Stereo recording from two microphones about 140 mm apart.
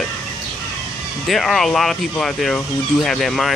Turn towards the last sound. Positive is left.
turn(degrees=0)  # may be behind; listen again after turning